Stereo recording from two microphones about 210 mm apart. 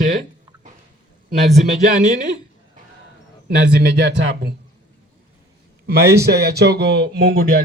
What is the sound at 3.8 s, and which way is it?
Speech, 50° right (ahead or behind).